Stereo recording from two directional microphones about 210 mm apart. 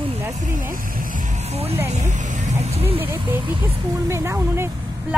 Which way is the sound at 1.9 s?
35° right (ahead or behind).